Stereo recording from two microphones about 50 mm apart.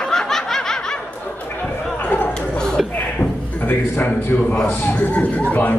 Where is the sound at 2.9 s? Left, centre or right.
Left.